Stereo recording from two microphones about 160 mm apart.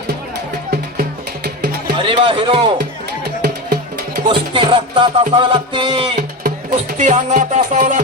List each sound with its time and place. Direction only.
2.0 s speech: 35° right (ahead or behind)
3.2 s music: 85° right
4.3 s music: 30° right (ahead or behind)
6.9 s music: 50° right (ahead or behind)